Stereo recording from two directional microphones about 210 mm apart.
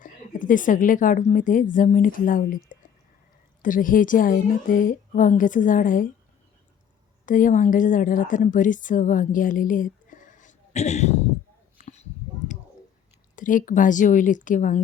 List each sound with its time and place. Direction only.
0.0 s a woman's voice: 40° left (ahead or behind)
3.6 s a woman's voice: 40° left (ahead or behind)
7.3 s a woman's voice: 40° left (ahead or behind)
11.8 s a sound: 30° left (ahead or behind)
13.3 s a woman's voice: 40° left (ahead or behind)